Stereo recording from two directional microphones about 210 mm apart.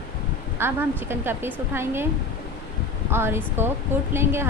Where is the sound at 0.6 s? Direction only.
10° right (ahead or behind).